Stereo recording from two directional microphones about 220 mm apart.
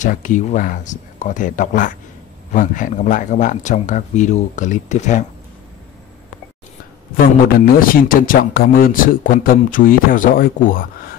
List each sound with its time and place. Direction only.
0.0 s speech: 35° left (ahead or behind)
7.6 s speech: 40° left (ahead or behind)